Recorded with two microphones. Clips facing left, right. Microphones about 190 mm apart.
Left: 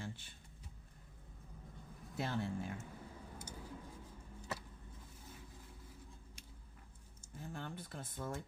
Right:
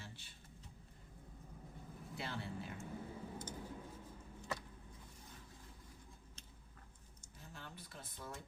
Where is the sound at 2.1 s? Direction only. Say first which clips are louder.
Left 6 dB; 45° left (ahead or behind).